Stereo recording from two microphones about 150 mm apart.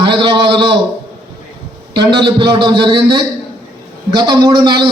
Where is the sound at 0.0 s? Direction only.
30° right (ahead or behind).